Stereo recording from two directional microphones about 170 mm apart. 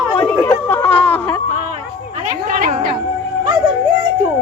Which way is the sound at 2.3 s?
50° right (ahead or behind).